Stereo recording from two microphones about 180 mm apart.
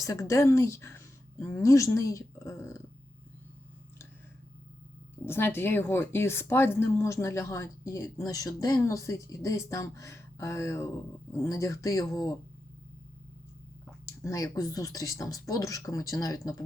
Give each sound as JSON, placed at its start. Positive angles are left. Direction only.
{"t": 0.0, "sound": "speech", "side_deg": 15}
{"t": 5.2, "sound": "speech", "side_deg": 15}
{"t": 14.0, "sound": "speech", "side_deg": 15}